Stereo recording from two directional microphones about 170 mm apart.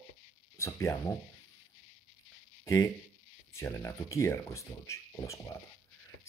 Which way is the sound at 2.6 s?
15° left (ahead or behind).